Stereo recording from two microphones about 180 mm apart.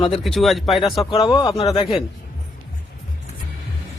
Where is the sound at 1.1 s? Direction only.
25° left (ahead or behind).